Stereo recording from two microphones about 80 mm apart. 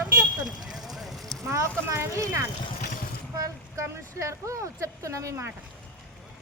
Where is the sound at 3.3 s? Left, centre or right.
Right.